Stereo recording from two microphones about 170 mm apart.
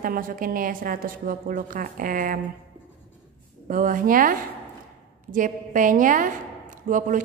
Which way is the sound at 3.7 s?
55° right (ahead or behind).